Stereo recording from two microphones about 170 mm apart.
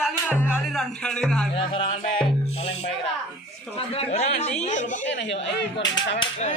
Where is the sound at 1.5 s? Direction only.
30° left (ahead or behind).